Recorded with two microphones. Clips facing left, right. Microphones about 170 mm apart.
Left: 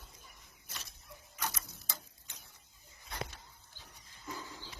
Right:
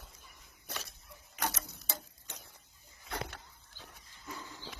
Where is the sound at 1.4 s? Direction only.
70° right (ahead or behind).